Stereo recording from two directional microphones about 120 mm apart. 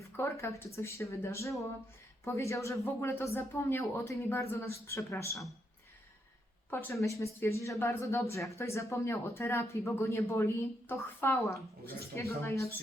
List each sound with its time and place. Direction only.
0.2 s speech: 20° left (ahead or behind)
6.7 s speech: 20° left (ahead or behind)